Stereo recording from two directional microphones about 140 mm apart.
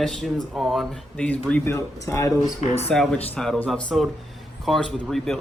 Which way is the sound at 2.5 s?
50° left (ahead or behind).